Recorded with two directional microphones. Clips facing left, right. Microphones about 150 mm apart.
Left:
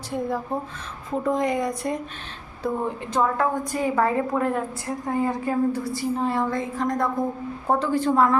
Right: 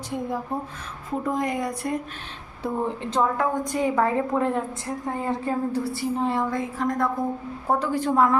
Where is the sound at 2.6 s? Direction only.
25° right (ahead or behind).